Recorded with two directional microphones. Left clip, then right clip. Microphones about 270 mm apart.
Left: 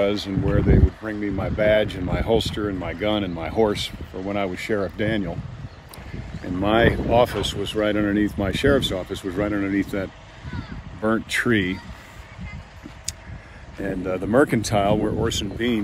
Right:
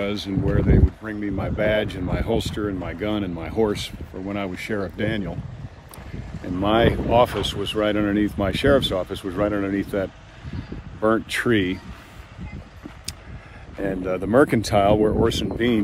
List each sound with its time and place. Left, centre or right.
0.0 s speech: centre
6.4 s speech: centre
13.7 s speech: centre